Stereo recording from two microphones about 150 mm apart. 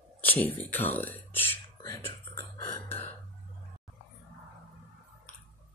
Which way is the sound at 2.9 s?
45° left (ahead or behind).